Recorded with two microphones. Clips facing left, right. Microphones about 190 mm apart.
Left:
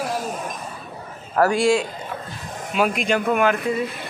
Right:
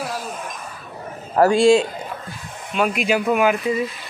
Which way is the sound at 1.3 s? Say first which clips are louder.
Right 4 dB; 25° right (ahead or behind).